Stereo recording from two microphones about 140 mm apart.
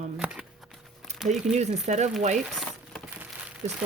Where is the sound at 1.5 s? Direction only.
55° right (ahead or behind).